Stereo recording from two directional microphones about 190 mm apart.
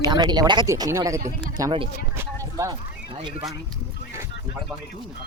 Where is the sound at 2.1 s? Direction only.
15° right (ahead or behind).